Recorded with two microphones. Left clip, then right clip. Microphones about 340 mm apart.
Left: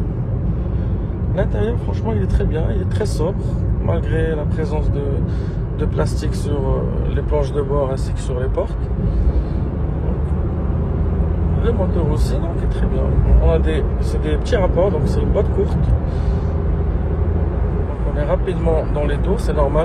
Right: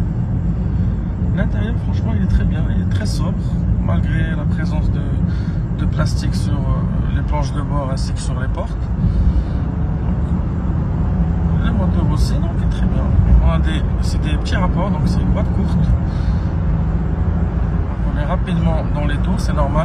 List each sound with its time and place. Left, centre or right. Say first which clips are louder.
1.3 s speech: left 6 dB; centre
3.9 s speech: left 6 dB; centre
7.3 s speech: left 6 dB; centre
14.5 s speech: left 6 dB; centre
18.3 s speech: left 5 dB; centre